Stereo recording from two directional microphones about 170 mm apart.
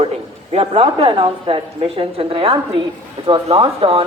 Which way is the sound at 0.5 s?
35° right (ahead or behind).